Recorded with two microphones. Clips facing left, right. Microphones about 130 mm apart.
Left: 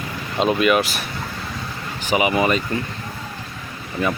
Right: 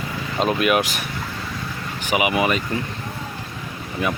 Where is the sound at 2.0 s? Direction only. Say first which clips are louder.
Left 2 dB; 10° right (ahead or behind).